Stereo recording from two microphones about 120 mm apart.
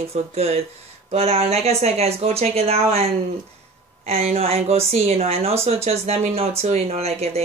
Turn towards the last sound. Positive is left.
turn(degrees=-60)  # may be behind; listen again after turning